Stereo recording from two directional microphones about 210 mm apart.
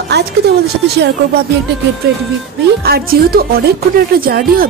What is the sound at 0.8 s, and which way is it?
Speech, 50° right (ahead or behind).